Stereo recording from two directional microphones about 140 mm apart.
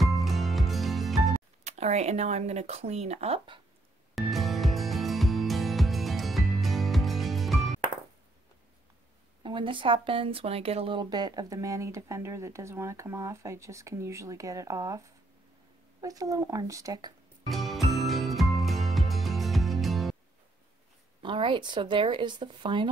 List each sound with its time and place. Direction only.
0.0 s music: centre (ahead or behind)
1.6 s speech: 55° right (ahead or behind)
4.1 s music: centre (ahead or behind)
9.4 s speech: 35° right (ahead or behind)
17.5 s music: centre (ahead or behind)
21.2 s speech: 35° right (ahead or behind)